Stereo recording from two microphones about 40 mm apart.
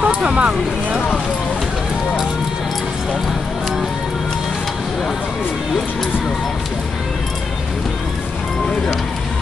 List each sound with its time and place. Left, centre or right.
0.0 s speech: right